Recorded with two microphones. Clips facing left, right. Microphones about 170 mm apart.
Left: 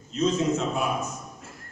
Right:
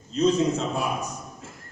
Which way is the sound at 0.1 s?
35° right (ahead or behind).